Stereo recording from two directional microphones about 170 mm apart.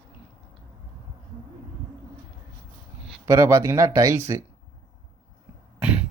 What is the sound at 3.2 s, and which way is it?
Speech, 15° right (ahead or behind).